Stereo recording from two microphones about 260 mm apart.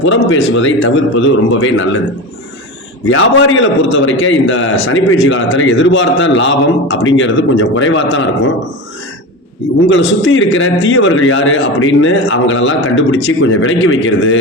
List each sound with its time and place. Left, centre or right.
0.0 s a man's voice: left
3.1 s a man's voice: left
9.9 s a man's voice: left